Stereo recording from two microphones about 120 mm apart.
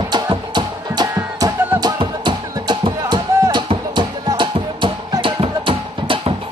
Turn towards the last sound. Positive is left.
turn(degrees=-45)  # may be behind; listen again after turning